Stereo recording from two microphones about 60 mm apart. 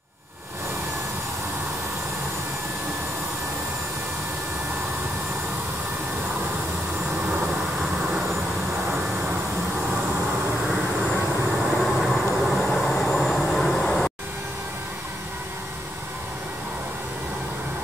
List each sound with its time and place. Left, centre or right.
7.2 s vehicle: centre
10.7 s train: centre
13.8 s vehicle: centre